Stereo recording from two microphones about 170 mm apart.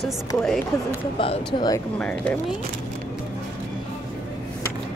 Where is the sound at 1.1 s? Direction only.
30° left (ahead or behind).